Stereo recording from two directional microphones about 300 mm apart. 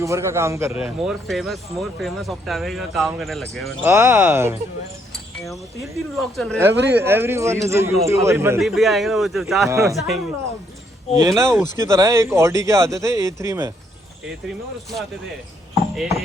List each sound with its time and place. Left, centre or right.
0.0 s speech: centre
6.7 s speech: right
7.0 s a man's voice: centre
11.2 s a man's voice: centre
16.0 s speech: centre